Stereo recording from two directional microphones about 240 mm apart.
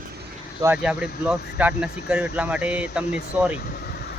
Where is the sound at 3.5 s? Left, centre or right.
Left.